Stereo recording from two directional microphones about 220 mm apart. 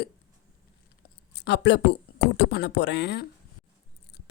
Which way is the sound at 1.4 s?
50° left (ahead or behind).